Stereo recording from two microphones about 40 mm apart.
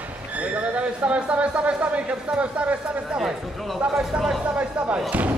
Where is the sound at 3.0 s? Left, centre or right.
Centre.